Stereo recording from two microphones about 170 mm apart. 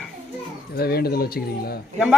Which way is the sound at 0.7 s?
65° left (ahead or behind).